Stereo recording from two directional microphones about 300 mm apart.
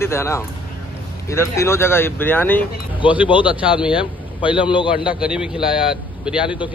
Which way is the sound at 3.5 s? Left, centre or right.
Centre.